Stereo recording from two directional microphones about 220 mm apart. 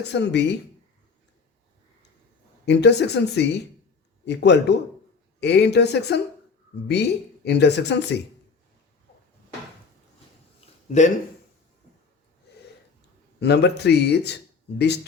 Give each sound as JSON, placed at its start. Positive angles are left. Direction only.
{"t": 0.1, "sound": "speech", "side_deg": 50}
{"t": 2.6, "sound": "speech", "side_deg": 50}
{"t": 10.8, "sound": "speech", "side_deg": 35}
{"t": 13.4, "sound": "speech", "side_deg": 50}